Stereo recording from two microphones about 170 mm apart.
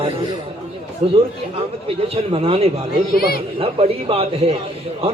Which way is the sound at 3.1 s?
60° left (ahead or behind).